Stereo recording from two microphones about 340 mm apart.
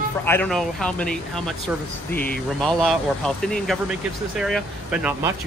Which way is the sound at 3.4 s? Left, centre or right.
Centre.